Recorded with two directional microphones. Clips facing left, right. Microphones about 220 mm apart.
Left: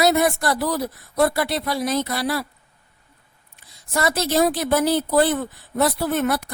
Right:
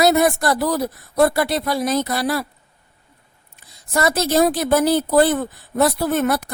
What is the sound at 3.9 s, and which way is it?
A woman's voice, 45° right (ahead or behind).